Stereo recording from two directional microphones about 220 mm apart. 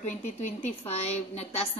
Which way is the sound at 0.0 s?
35° left (ahead or behind).